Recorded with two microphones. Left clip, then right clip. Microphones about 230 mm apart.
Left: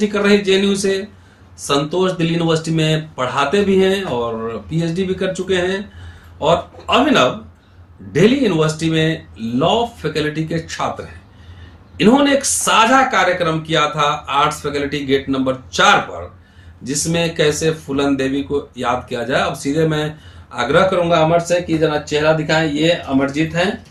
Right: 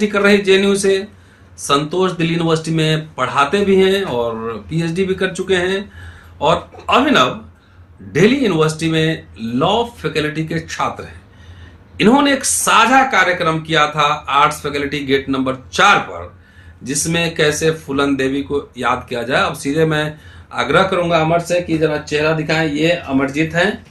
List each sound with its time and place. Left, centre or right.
0.0 s speech: centre